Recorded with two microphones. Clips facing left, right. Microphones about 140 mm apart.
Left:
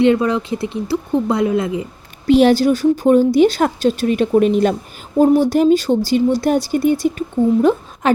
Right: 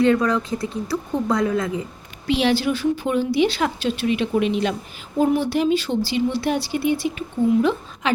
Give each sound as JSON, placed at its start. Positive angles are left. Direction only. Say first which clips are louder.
{"t": 0.0, "sound": "speech", "louder": "left 4 dB", "side_deg": 25}
{"t": 2.2, "sound": "speech", "louder": "left 8 dB", "side_deg": 45}